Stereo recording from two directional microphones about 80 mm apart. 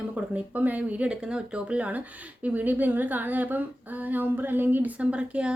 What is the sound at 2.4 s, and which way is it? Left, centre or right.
Humming, centre.